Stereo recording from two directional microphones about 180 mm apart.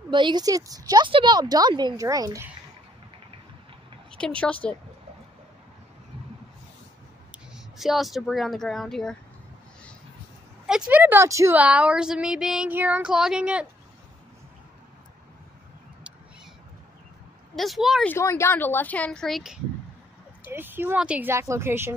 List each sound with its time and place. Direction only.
0.1 s speech: 25° right (ahead or behind)
4.1 s a woman's voice: 5° left (ahead or behind)
7.5 s speech: centre (ahead or behind)
10.7 s a woman's voice: 5° right (ahead or behind)
17.6 s speech: centre (ahead or behind)
18.1 s a woman's voice: 15° left (ahead or behind); by 21.9 s 15° right (ahead or behind)